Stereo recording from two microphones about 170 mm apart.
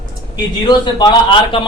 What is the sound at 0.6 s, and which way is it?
Speech, 25° left (ahead or behind).